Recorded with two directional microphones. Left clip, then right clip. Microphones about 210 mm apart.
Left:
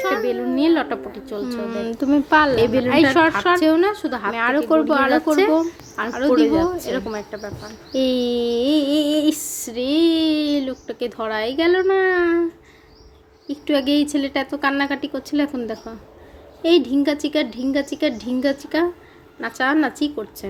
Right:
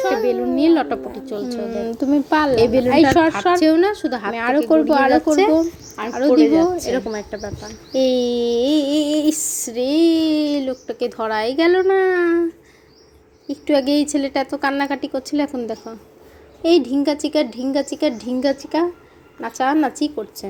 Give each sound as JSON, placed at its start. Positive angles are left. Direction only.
{"t": 0.2, "sound": "a woman's voice", "side_deg": -10}
{"t": 1.5, "sound": "a woman's voice", "side_deg": 5}
{"t": 7.9, "sound": "female singing", "side_deg": 0}
{"t": 13.5, "sound": "female singing", "side_deg": 0}